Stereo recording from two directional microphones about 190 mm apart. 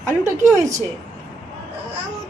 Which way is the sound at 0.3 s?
15° right (ahead or behind).